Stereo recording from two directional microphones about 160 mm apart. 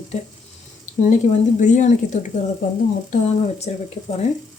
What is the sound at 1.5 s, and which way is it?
Speech, 50° left (ahead or behind).